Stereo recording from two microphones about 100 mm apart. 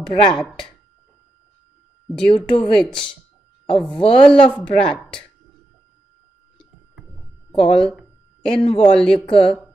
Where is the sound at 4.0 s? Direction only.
65° left (ahead or behind).